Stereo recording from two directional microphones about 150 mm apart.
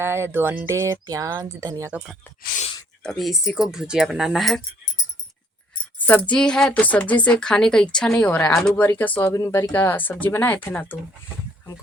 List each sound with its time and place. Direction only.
0.0 s speech: 15° right (ahead or behind)
1.9 s speech: 5° right (ahead or behind)
2.4 s speech: 65° left (ahead or behind)
3.0 s speech: centre (ahead or behind)
6.0 s speech: 10° left (ahead or behind)